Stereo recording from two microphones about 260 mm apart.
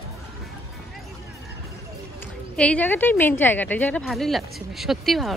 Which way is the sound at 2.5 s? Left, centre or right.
Centre.